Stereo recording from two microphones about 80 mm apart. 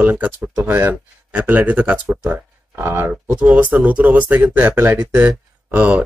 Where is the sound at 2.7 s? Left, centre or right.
Right.